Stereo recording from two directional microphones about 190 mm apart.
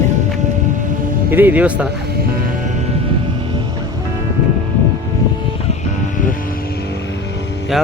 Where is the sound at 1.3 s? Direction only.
10° right (ahead or behind).